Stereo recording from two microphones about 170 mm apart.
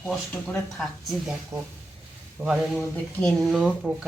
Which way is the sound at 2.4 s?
5° right (ahead or behind).